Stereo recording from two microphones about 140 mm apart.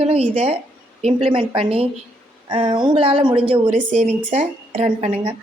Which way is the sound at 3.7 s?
55° right (ahead or behind).